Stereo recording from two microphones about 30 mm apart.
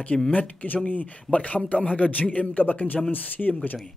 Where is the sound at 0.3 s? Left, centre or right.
Left.